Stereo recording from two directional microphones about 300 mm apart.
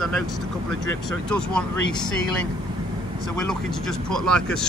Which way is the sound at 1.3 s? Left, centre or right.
Centre.